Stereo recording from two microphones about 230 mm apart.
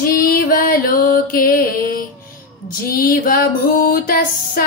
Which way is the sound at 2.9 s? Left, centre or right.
Left.